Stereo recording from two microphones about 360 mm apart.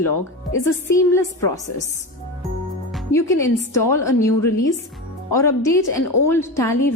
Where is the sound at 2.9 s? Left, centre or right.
Centre.